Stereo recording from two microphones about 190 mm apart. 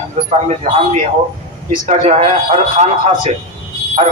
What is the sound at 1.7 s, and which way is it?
A man's voice, 35° right (ahead or behind).